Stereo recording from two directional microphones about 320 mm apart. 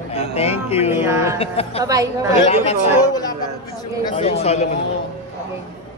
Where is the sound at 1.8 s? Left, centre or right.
Centre.